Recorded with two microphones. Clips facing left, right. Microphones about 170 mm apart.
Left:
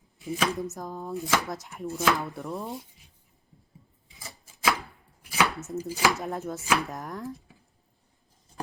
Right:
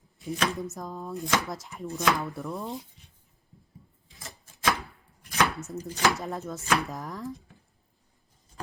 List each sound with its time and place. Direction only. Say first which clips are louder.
0.2 s chopping: left 1 dB; centre (ahead or behind)
4.1 s a sound: even; centre (ahead or behind)
5.2 s chopping: even; 5° left (ahead or behind)